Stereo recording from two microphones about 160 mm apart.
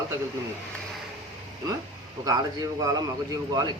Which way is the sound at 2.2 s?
25° right (ahead or behind).